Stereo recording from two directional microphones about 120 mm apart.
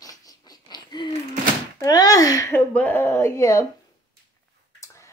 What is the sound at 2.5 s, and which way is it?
Speech, 15° left (ahead or behind).